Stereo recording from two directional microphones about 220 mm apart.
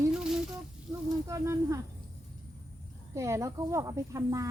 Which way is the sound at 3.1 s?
15° right (ahead or behind).